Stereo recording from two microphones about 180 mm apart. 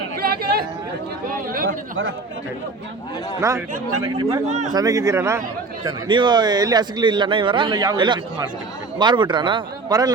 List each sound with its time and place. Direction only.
0.2 s chatter: 60° right (ahead or behind)
1.3 s speech: 50° right (ahead or behind)
3.4 s speech: 15° right (ahead or behind)
4.4 s speech: 40° right (ahead or behind)
4.7 s a man's voice: 20° right (ahead or behind)